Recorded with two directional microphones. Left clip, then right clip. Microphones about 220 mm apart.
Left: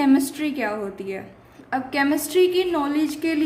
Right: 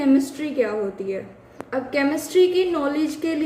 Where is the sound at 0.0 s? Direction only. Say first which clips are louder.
Even; 35° left (ahead or behind).